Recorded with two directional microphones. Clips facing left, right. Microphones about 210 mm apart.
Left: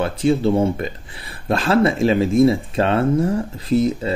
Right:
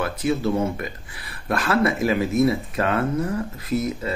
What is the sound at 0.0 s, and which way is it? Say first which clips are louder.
Speech: left 5 dB; 30° left (ahead or behind).